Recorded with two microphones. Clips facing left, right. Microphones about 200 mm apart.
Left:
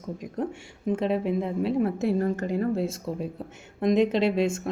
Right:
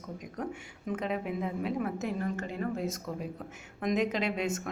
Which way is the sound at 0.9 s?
30° left (ahead or behind).